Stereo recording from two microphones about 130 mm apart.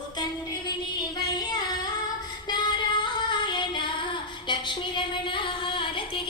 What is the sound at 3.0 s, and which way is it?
Child singing, 35° left (ahead or behind).